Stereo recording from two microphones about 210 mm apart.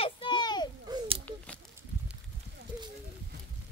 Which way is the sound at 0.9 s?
25° right (ahead or behind).